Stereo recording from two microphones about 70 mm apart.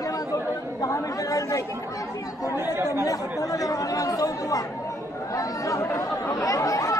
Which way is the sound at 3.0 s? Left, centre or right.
Left.